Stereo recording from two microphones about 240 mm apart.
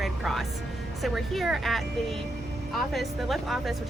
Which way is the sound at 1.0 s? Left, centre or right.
Centre.